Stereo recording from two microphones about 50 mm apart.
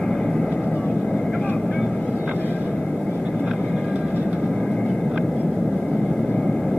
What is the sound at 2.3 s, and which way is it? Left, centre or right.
Vehicle, left.